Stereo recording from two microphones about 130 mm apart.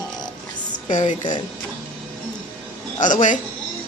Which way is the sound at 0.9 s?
70° left (ahead or behind).